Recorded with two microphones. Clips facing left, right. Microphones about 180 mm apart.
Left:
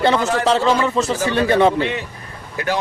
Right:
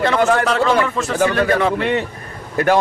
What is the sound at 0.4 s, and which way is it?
A man's voice, 25° left (ahead or behind).